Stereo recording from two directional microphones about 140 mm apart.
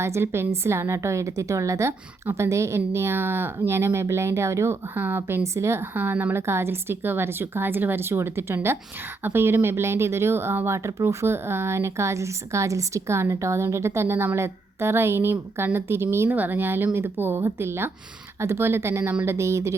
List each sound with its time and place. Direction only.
0.0 s a woman's voice: 20° right (ahead or behind)